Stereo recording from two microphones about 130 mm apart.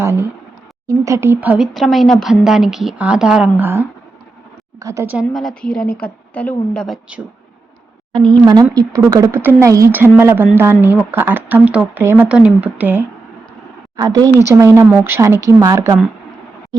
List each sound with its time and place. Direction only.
0.0 s a woman's voice: 20° right (ahead or behind)
5.3 s speech: centre (ahead or behind)
6.8 s speech: centre (ahead or behind)
8.1 s a woman's voice: 35° right (ahead or behind); by 13.1 s 15° right (ahead or behind)
13.9 s a woman's voice: 30° right (ahead or behind)